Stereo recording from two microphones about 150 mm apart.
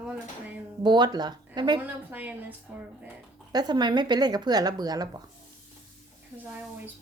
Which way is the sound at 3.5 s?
30° right (ahead or behind).